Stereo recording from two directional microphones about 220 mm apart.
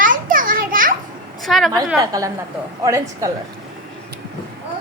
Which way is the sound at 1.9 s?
15° right (ahead or behind).